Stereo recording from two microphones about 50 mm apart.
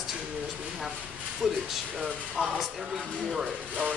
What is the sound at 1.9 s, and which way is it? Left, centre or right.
Speech, centre.